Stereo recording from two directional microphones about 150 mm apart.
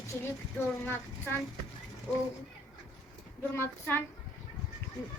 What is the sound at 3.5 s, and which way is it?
Speech, 15° left (ahead or behind).